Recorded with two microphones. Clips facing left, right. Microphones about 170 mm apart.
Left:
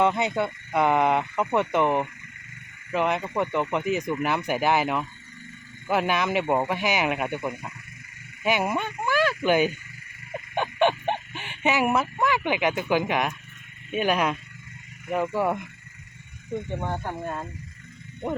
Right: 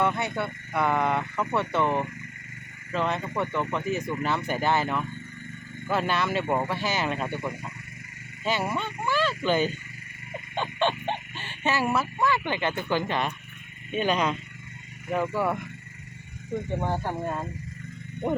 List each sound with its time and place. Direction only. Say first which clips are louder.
0.0 s speech: left 4 dB; 20° left (ahead or behind)
16.8 s speech: right 2 dB; 5° right (ahead or behind)